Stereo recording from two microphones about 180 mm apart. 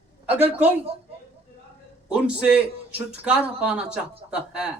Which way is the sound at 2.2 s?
5° right (ahead or behind).